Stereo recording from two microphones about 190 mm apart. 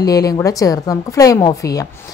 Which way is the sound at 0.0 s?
20° left (ahead or behind).